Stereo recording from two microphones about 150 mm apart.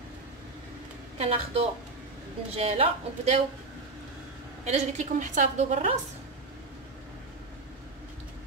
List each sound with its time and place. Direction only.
1.1 s a woman's voice: 40° right (ahead or behind)
4.6 s a woman's voice: 50° right (ahead or behind)